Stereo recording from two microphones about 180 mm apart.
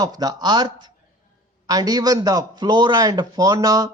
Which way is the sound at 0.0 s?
20° right (ahead or behind).